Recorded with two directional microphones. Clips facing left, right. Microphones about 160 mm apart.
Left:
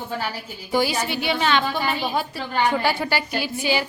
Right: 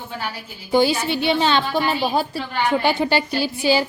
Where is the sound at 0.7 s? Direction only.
25° right (ahead or behind).